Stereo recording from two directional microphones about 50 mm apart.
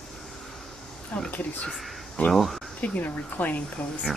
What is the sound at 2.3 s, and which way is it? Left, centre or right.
Speech, centre.